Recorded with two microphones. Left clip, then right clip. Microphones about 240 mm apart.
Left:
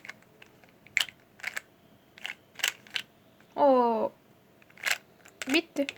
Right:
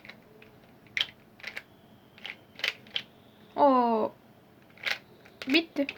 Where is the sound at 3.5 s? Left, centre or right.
Centre.